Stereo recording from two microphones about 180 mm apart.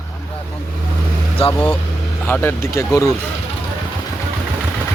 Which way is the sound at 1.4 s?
30° left (ahead or behind).